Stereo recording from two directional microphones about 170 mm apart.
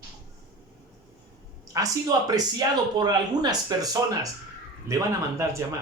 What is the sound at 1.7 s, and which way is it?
Speech, 20° right (ahead or behind).